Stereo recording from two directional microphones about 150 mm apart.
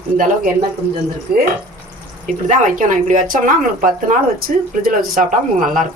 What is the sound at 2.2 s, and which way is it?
Speech, 60° right (ahead or behind).